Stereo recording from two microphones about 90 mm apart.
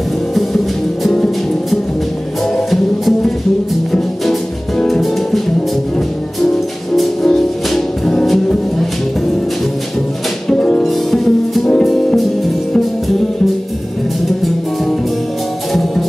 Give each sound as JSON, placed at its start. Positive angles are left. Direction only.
{"t": 0.3, "sound": "music", "side_deg": 0}
{"t": 10.5, "sound": "music", "side_deg": 10}